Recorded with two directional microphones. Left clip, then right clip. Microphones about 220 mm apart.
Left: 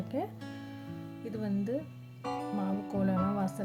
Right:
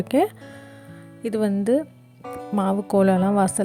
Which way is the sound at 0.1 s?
45° right (ahead or behind).